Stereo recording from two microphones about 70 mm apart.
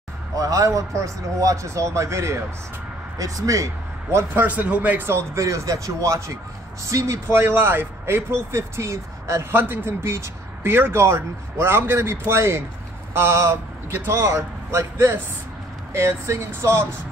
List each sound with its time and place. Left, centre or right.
0.4 s speech: right
3.2 s speech: right
4.4 s speech: right
5.0 s speech: right
9.5 s speech: right